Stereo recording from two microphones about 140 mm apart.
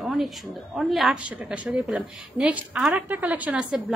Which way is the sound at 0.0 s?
5° right (ahead or behind).